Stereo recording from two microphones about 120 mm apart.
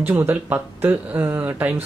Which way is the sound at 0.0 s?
20° right (ahead or behind).